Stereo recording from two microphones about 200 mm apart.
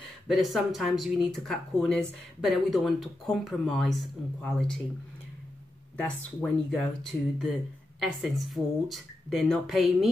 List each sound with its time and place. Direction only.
0.3 s speech: centre (ahead or behind)
5.9 s speech: 5° left (ahead or behind)